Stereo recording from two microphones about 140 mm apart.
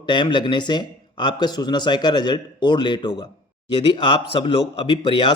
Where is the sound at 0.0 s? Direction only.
35° left (ahead or behind).